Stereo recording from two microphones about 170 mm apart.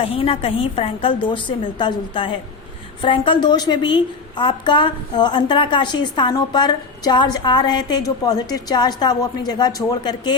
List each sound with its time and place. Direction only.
0.0 s a woman's voice: 35° left (ahead or behind)